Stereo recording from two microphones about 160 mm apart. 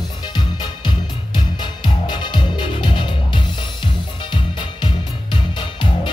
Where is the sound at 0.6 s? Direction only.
25° left (ahead or behind).